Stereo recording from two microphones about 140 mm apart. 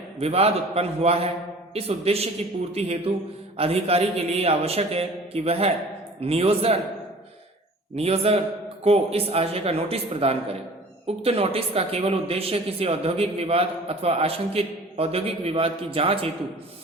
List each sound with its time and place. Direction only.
0.2 s speech: 45° right (ahead or behind)
7.9 s speech: 45° right (ahead or behind)